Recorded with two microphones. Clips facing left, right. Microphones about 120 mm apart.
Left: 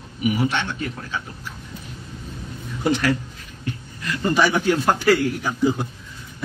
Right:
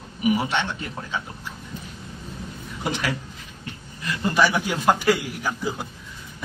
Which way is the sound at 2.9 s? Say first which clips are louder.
Left 7 dB; 20° right (ahead or behind).